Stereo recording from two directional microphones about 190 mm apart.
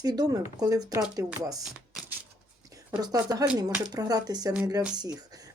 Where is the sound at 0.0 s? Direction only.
20° right (ahead or behind).